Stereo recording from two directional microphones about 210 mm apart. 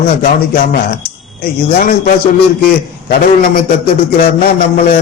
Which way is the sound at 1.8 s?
45° left (ahead or behind).